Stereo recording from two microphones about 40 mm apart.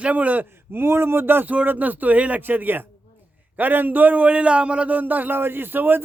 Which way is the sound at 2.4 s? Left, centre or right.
Right.